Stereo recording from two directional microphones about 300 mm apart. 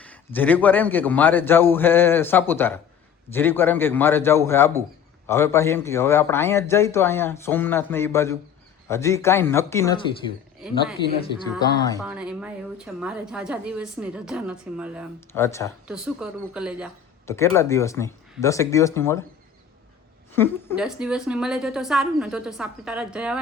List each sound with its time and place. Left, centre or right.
0.0 s a man's voice: centre
11.9 s a woman's voice: centre
15.3 s a man's voice: centre
15.9 s a woman's voice: centre
17.2 s a man's voice: centre
20.3 s a woman's voice: centre